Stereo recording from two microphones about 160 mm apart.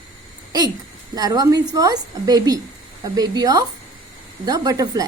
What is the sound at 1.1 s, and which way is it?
A woman's voice, 25° right (ahead or behind).